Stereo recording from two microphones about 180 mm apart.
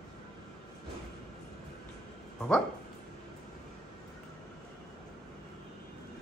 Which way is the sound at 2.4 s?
5° left (ahead or behind).